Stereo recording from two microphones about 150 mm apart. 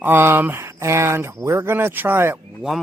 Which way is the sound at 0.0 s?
15° right (ahead or behind).